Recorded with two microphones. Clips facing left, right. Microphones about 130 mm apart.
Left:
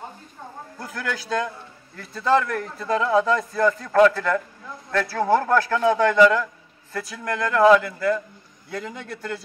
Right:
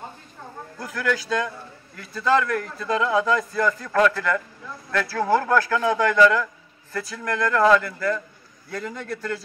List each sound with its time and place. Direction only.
0.7 s a man's voice: 25° left (ahead or behind)